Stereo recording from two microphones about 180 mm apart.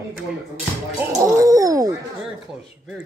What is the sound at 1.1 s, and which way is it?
Speech, 15° right (ahead or behind).